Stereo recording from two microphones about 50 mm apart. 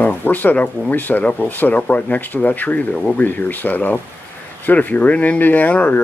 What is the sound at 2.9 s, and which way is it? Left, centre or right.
Speech, centre.